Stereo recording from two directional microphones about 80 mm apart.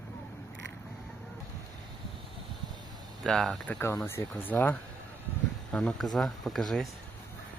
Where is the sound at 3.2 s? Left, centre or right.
Centre.